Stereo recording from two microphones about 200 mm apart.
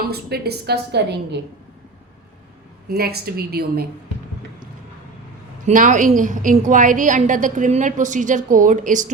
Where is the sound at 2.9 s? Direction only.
50° right (ahead or behind).